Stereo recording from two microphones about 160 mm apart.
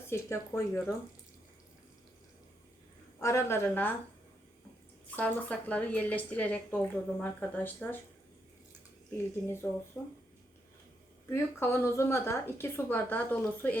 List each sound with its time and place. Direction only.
0.1 s a woman's voice: 15° left (ahead or behind)
3.2 s a woman's voice: 20° left (ahead or behind)
5.1 s a woman's voice: 10° left (ahead or behind)
10.0 s a woman's voice: 10° left (ahead or behind)
11.3 s a woman's voice: 15° left (ahead or behind)